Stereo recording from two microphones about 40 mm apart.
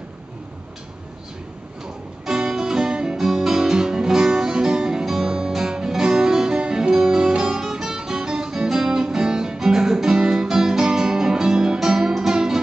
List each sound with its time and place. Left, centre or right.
2.2 s music: centre